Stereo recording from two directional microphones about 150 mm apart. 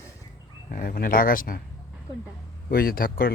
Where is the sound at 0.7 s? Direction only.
75° left (ahead or behind).